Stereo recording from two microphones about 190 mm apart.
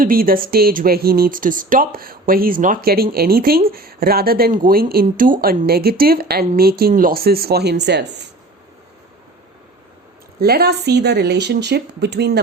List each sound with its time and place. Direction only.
0.0 s speech: 50° right (ahead or behind)
10.4 s speech: 60° right (ahead or behind)